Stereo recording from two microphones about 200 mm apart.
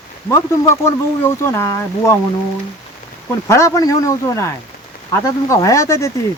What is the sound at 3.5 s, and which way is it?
Speech, 15° left (ahead or behind).